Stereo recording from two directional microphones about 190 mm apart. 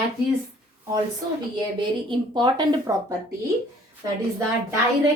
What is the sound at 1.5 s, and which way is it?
Speech, 25° right (ahead or behind).